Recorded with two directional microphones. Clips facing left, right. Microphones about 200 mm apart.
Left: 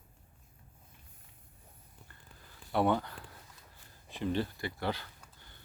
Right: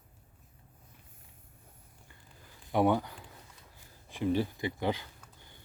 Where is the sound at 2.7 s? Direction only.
10° right (ahead or behind).